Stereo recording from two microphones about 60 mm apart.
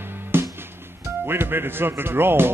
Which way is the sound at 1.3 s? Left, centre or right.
Right.